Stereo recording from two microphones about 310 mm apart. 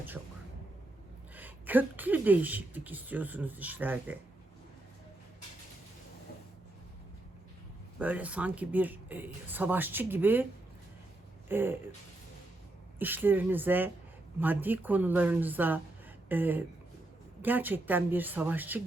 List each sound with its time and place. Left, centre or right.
1.4 s speech: centre
7.9 s speech: centre
11.4 s speech: centre
13.0 s speech: centre